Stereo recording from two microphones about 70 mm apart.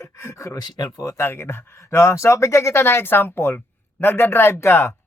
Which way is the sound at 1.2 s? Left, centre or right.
Left.